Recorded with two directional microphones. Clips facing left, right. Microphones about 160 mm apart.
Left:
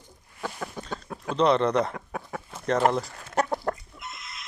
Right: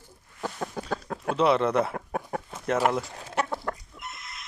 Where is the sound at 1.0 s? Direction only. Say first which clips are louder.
Right 3 dB; 65° right (ahead or behind).